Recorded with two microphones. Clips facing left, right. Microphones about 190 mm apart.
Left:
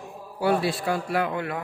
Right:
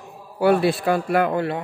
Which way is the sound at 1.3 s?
30° right (ahead or behind).